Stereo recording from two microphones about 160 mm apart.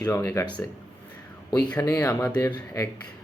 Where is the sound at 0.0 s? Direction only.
20° left (ahead or behind).